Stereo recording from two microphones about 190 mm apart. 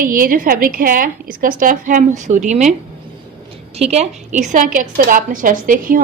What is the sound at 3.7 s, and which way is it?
A woman's voice, 35° right (ahead or behind).